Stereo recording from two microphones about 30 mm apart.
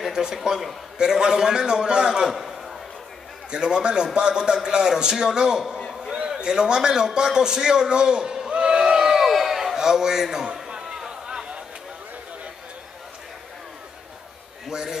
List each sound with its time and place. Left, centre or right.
0.1 s a man's voice: centre
2.2 s a man's voice: centre
3.5 s a man's voice: right
8.5 s a sound: right
9.1 s crowd: centre
9.8 s a man's voice: centre
11.1 s a sound: right
14.7 s speech: right